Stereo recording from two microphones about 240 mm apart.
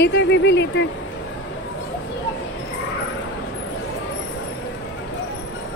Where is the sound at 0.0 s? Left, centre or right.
Left.